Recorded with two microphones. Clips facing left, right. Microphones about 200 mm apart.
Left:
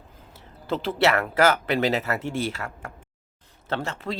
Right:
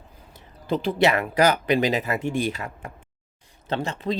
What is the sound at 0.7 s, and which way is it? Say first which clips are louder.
Speech: right 2 dB; 15° right (ahead or behind).